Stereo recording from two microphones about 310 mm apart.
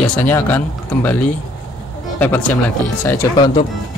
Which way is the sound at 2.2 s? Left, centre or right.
Centre.